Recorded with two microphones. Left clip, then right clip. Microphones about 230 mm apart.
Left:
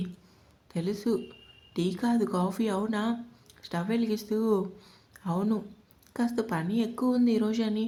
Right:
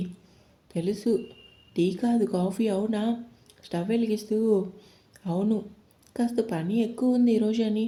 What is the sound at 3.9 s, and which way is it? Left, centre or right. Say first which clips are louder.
Speech: right 3 dB; left.